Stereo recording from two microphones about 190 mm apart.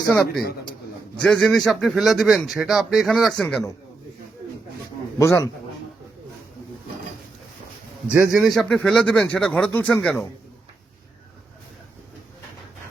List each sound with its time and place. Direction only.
0.1 s a man's voice: 5° left (ahead or behind)
5.2 s a man's voice: 15° left (ahead or behind)
8.0 s a man's voice: 5° right (ahead or behind)